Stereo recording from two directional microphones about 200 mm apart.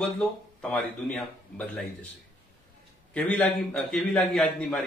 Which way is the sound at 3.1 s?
5° left (ahead or behind).